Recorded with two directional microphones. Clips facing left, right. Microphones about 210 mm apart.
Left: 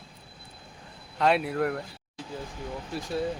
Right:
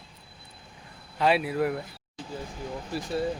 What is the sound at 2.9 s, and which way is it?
Speech, centre (ahead or behind).